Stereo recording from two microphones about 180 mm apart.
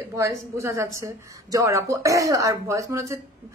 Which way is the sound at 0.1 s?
15° right (ahead or behind).